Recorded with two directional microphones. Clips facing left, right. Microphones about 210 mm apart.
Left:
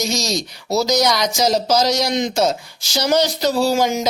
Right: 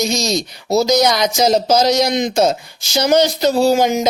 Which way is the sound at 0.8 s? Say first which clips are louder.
Right 3 dB; 25° right (ahead or behind).